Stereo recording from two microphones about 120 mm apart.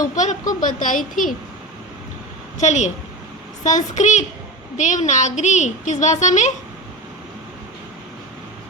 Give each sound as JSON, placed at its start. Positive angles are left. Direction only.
{"t": 0.2, "sound": "a woman's voice", "side_deg": 90}
{"t": 2.6, "sound": "a woman's voice", "side_deg": 75}
{"t": 3.6, "sound": "a woman's voice", "side_deg": 90}